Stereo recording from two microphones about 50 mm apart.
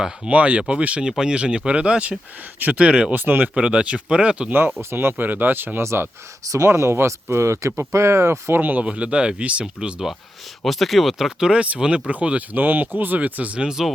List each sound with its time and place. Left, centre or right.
0.3 s speech: right
3.2 s speech: right
3.5 s speech: right
4.8 s speech: right
5.1 s speech: right
5.8 s speech: right
6.7 s speech: right
8.5 s speech: right
8.8 s speech: right
10.6 s speech: centre
11.6 s speech: right
12.5 s speech: right
13.6 s speech: centre